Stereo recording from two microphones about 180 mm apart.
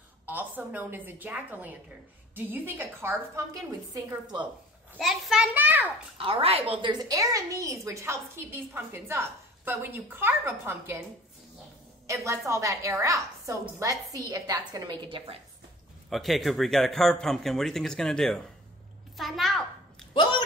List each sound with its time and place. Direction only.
0.3 s a woman's voice: 10° right (ahead or behind)
3.9 s a woman's voice: 25° right (ahead or behind)
4.9 s a woman's voice: centre (ahead or behind)
6.1 s a woman's voice: 30° right (ahead or behind); by 11.0 s 15° right (ahead or behind)
12.1 s a woman's voice: 15° right (ahead or behind)
16.1 s speech: centre (ahead or behind)
19.1 s a sound: centre (ahead or behind)
20.2 s a sound: 25° left (ahead or behind)